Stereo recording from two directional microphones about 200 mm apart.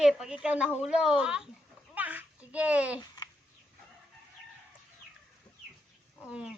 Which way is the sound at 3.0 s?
20° left (ahead or behind).